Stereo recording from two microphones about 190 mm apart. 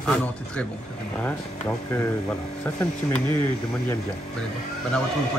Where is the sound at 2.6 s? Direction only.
10° left (ahead or behind).